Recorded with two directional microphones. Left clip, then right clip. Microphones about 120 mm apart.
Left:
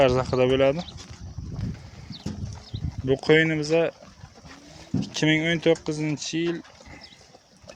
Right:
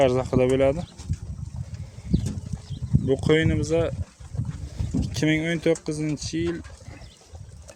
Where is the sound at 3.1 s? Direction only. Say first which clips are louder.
Left 2 dB; 35° right (ahead or behind).